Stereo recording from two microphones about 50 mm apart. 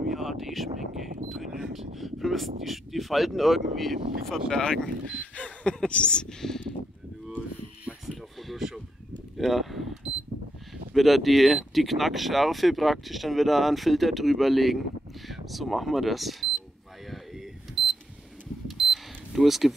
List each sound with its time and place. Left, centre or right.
0.1 s speech: centre
5.1 s speech: left
6.4 s a sound: centre
7.2 s cattle: right
8.1 s a sound: centre
10.9 s speech: centre
17.8 s alarm clock: centre
18.7 s camera: centre